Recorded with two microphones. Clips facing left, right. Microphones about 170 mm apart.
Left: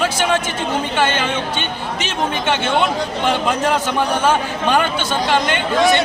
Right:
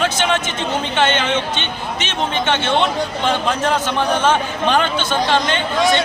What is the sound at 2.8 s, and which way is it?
A man's voice, 15° left (ahead or behind).